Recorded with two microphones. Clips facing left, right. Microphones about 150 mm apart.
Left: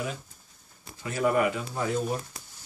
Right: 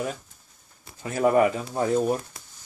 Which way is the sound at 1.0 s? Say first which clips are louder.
Right 5 dB; 40° right (ahead or behind).